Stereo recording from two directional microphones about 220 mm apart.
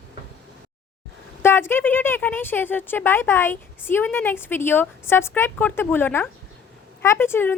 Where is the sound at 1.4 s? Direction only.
10° left (ahead or behind).